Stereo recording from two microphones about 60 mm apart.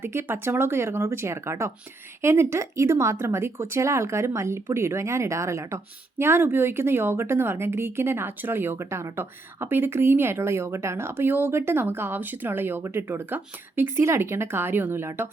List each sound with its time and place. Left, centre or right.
0.0 s speech: right